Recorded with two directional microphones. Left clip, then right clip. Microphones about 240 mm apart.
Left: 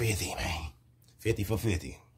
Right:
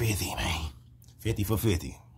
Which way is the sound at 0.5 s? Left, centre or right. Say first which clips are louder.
Right 3 dB; centre.